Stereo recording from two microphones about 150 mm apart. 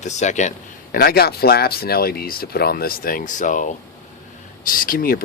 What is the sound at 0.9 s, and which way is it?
Speech, 90° left.